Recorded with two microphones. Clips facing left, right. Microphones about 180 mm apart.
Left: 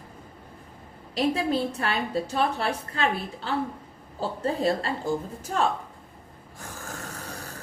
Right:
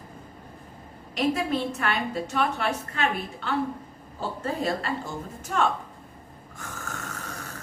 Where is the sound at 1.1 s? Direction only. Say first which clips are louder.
Left 1 dB; 30° left (ahead or behind).